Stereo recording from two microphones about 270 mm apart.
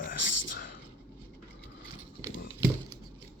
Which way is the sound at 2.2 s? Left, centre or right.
Centre.